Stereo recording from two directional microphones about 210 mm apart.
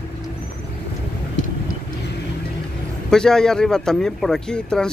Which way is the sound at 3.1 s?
5° left (ahead or behind).